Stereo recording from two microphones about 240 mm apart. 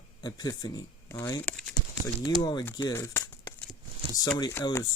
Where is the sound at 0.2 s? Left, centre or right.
Centre.